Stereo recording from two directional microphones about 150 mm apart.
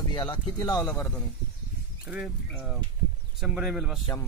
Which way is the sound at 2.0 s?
5° right (ahead or behind).